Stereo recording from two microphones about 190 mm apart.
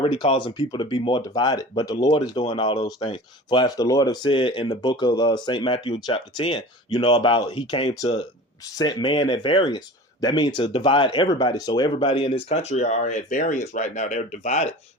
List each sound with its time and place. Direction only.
0.0 s speech: 30° left (ahead or behind)